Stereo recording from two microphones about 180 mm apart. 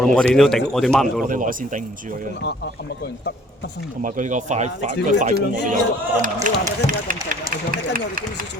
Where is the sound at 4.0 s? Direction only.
45° right (ahead or behind).